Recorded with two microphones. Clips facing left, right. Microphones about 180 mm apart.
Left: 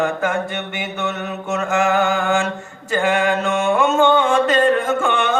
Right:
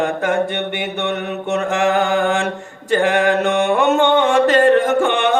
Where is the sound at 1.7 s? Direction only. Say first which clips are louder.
Even; 35° right (ahead or behind).